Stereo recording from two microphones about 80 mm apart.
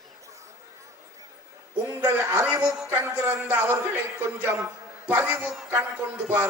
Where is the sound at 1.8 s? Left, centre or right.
Right.